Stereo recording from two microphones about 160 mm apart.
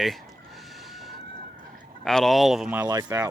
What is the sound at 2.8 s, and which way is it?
Speech, 25° right (ahead or behind).